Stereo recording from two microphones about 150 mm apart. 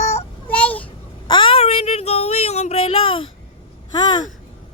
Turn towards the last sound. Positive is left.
turn(degrees=30)  # may be behind; listen again after turning